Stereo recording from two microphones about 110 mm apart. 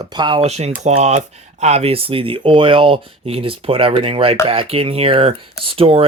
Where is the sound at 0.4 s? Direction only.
80° right.